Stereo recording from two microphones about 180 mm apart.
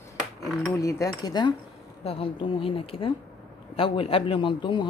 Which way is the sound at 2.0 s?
30° left (ahead or behind).